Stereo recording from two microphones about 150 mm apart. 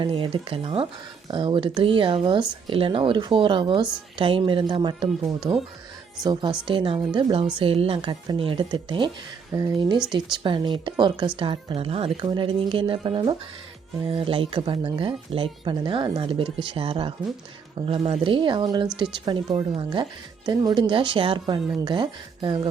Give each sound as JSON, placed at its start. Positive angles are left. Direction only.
{"t": 0.0, "sound": "speech", "side_deg": -35}
{"t": 6.7, "sound": "speech", "side_deg": -35}
{"t": 9.5, "sound": "speech", "side_deg": -20}
{"t": 10.1, "sound": "speech", "side_deg": -30}